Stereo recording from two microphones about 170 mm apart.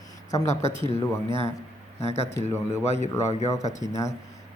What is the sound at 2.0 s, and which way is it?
Speech, 40° left (ahead or behind).